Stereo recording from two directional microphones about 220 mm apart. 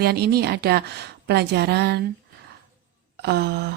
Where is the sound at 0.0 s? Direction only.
45° right (ahead or behind).